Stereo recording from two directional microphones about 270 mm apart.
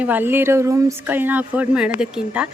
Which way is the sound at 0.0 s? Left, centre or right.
Centre.